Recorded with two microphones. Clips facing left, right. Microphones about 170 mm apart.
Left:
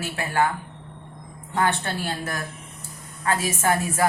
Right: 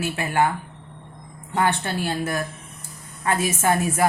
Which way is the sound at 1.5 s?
20° right (ahead or behind).